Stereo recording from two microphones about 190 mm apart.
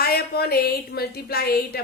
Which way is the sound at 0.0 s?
55° left (ahead or behind).